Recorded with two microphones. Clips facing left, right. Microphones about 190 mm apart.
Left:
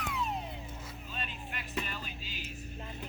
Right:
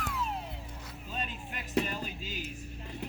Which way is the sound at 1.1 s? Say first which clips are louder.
Right 4 dB; 40° right (ahead or behind).